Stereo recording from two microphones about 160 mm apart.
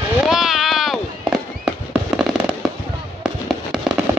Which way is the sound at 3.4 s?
Centre (ahead or behind).